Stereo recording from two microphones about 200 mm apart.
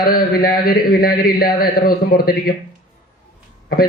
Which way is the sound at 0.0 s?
45° left (ahead or behind).